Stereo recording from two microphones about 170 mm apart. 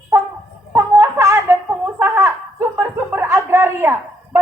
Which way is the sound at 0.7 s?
15° right (ahead or behind).